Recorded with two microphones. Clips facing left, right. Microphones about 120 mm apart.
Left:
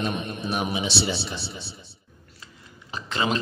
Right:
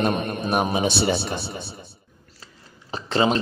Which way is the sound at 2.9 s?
35° right (ahead or behind).